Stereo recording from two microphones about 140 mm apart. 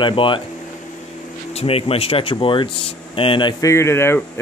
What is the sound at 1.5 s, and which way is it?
Speech, 45° left (ahead or behind).